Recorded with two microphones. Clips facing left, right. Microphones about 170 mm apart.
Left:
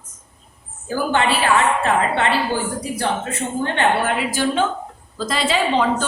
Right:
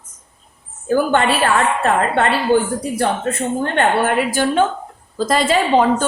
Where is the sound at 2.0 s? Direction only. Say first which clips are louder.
Right 2 dB; 50° right (ahead or behind).